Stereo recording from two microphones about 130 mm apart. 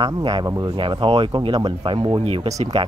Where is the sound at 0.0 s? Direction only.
35° right (ahead or behind).